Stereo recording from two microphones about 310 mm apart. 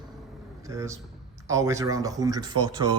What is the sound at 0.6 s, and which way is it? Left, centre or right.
A man's voice, centre.